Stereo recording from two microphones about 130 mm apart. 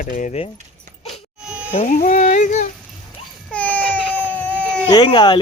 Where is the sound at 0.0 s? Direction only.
85° left.